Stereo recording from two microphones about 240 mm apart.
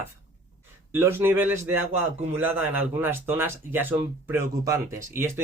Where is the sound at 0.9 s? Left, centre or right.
Centre.